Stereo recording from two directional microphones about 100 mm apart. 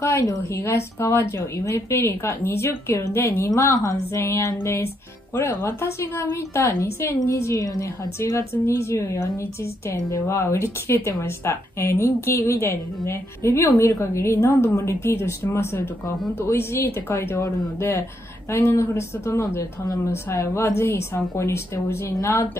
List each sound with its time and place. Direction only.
0.0 s a woman's voice: 30° left (ahead or behind)
8.2 s a woman's voice: 25° left (ahead or behind)